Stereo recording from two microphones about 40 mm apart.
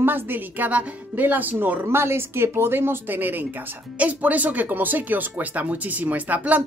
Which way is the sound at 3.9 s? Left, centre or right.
Right.